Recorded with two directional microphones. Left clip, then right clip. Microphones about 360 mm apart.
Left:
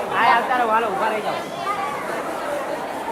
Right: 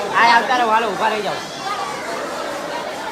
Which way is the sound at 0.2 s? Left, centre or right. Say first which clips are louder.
Right 4 dB; right.